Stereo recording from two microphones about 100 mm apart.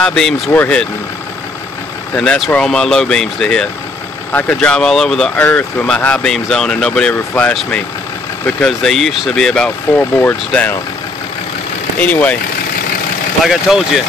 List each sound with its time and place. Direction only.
0.0 s speech: 5° left (ahead or behind)
0.5 s speech: 20° left (ahead or behind)
2.1 s speech: 5° left (ahead or behind)
4.3 s speech: 15° left (ahead or behind)
4.6 s speech: 5° left (ahead or behind)
5.4 s speech: 15° left (ahead or behind)
12.0 s speech: 15° left (ahead or behind)
13.5 s speech: 5° right (ahead or behind)